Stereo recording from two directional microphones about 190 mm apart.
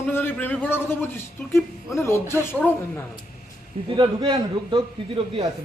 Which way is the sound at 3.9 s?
25° right (ahead or behind).